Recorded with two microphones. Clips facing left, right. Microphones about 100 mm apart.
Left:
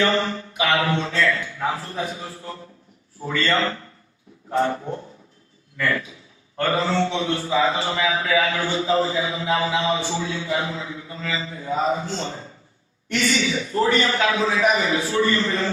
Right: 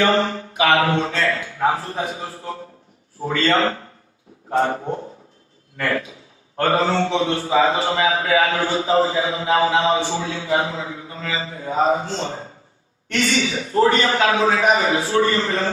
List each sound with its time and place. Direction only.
0.0 s a sound: 35° right (ahead or behind)
0.8 s a man's voice: 40° right (ahead or behind)
3.2 s a man's voice: 35° right (ahead or behind)
5.7 s a man's voice: 50° right (ahead or behind)
6.6 s a man's voice: 35° right (ahead or behind)
13.1 s a man's voice: 40° right (ahead or behind)
13.5 s a man's voice: 30° right (ahead or behind)